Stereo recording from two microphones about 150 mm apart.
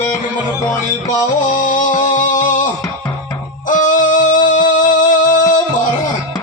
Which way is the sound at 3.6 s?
60° left (ahead or behind).